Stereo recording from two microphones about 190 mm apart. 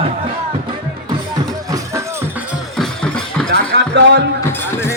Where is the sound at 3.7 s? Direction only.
65° right (ahead or behind).